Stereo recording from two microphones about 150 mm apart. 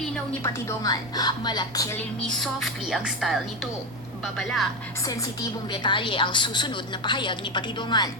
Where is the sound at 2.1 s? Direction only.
5° left (ahead or behind).